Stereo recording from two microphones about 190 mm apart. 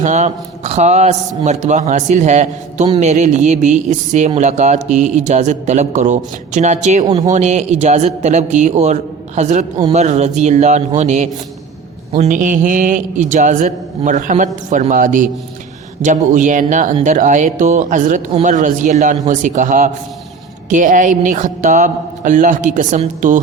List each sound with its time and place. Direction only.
0.0 s a man's voice: 40° right (ahead or behind)
7.0 s speech: 20° right (ahead or behind)
7.3 s a man's voice: 35° right (ahead or behind)